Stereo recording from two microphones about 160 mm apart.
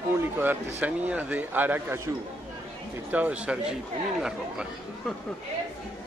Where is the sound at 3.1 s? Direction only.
10° right (ahead or behind).